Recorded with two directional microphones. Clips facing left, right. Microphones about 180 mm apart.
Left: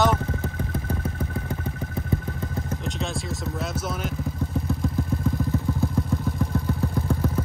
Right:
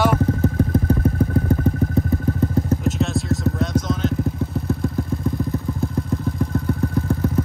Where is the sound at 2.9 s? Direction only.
Centre (ahead or behind).